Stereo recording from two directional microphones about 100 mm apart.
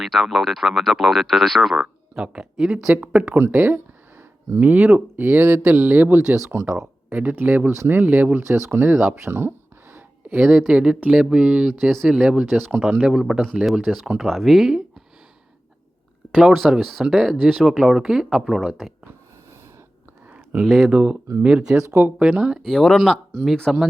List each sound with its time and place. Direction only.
0.0 s speech: centre (ahead or behind); by 9.0 s 20° right (ahead or behind)
9.2 s a sound: 25° right (ahead or behind)
10.4 s speech: 5° right (ahead or behind)
16.3 s speech: 5° right (ahead or behind)
20.6 s speech: 5° right (ahead or behind)
21.8 s speech: 20° right (ahead or behind)
22.2 s speech: 10° right (ahead or behind)